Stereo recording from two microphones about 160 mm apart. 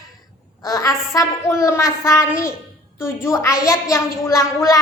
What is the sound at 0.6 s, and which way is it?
A woman's voice, 20° left (ahead or behind).